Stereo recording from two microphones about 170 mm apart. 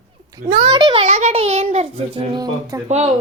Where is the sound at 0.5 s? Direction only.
25° right (ahead or behind).